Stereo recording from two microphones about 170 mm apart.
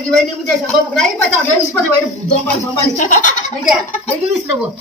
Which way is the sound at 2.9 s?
50° left (ahead or behind).